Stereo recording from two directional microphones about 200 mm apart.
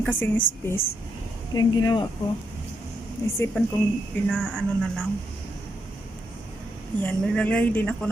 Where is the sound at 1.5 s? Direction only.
20° left (ahead or behind).